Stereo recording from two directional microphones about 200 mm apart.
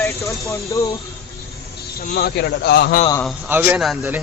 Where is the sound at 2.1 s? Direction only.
55° left (ahead or behind).